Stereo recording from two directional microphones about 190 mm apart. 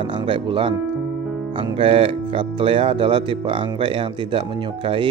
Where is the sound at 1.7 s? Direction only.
30° right (ahead or behind).